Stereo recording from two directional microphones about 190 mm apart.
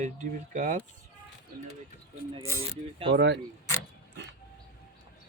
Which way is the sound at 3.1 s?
70° right (ahead or behind).